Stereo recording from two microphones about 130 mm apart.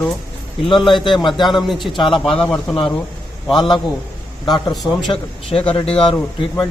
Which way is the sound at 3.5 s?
35° left (ahead or behind).